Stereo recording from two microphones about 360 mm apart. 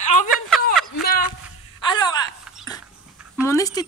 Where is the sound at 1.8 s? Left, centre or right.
Centre.